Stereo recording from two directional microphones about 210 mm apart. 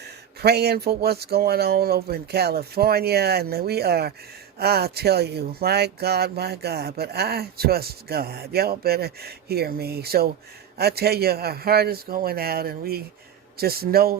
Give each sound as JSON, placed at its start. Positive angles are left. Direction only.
{"t": 0.0, "sound": "speech", "side_deg": -50}